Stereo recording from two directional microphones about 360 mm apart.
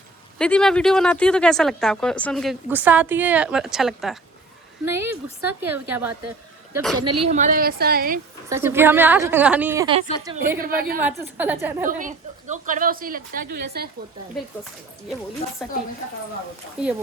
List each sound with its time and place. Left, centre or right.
0.3 s a woman's voice: centre
7.3 s a woman's voice: right
8.4 s a woman's voice: centre
10.6 s a woman's voice: right
11.0 s speech: centre
11.9 s a woman's voice: right
15.6 s speech: centre
16.8 s speech: centre